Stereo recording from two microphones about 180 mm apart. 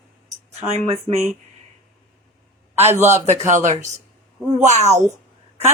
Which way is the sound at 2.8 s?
40° right (ahead or behind).